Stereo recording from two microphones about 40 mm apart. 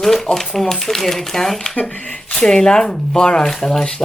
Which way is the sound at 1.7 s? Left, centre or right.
Left.